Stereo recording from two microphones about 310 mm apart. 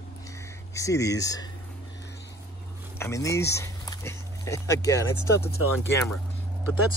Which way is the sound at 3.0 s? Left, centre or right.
Centre.